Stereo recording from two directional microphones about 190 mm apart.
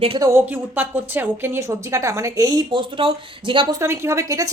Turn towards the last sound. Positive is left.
turn(degrees=-15)  # may be behind; listen again after turning